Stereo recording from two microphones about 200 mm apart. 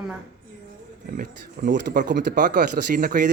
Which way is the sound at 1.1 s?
50° right (ahead or behind).